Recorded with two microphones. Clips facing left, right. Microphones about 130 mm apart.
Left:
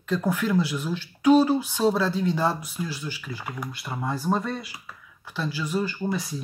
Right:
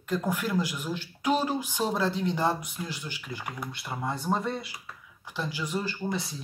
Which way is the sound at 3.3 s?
10° left (ahead or behind).